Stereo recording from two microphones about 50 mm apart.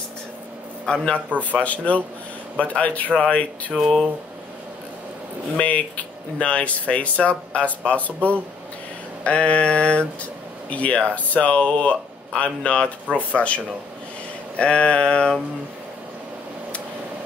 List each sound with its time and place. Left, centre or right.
0.8 s a man's voice: centre
1.6 s speech: left
3.7 s speech: centre
5.6 s speech: left
9.2 s speech: left
14.6 s speech: left